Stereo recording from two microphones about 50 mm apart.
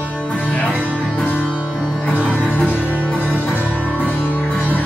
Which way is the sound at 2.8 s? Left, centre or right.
Right.